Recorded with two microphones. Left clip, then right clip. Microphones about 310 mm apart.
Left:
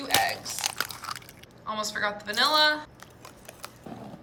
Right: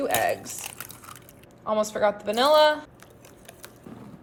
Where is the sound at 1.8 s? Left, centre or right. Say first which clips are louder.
Right 5 dB; centre.